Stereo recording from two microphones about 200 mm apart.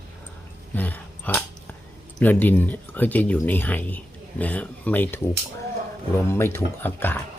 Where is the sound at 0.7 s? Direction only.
10° left (ahead or behind).